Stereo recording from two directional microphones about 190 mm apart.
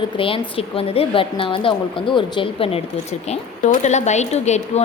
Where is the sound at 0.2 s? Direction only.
30° left (ahead or behind).